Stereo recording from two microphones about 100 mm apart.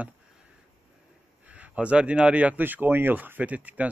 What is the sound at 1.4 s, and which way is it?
Speech, 15° right (ahead or behind).